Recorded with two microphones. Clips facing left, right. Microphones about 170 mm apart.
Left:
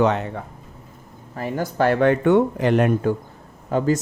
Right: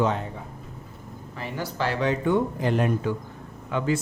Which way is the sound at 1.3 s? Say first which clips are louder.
Left 8 dB; 45° left (ahead or behind).